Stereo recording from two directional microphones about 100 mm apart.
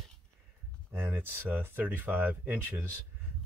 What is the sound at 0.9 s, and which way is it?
Speech, 20° right (ahead or behind).